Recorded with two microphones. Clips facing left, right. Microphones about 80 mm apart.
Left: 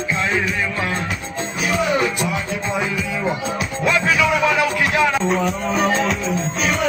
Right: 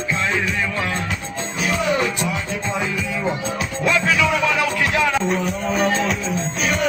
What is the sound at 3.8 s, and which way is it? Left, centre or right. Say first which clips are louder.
Music: left 1 dB; centre.